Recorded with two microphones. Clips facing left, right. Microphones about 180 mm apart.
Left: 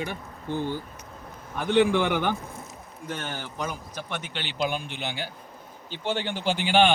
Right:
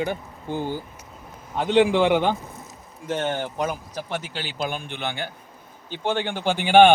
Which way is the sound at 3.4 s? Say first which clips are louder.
Right 6 dB; 50° right (ahead or behind).